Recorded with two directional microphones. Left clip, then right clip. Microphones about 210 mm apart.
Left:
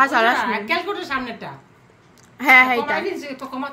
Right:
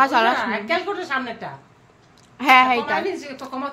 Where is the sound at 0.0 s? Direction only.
5° right (ahead or behind).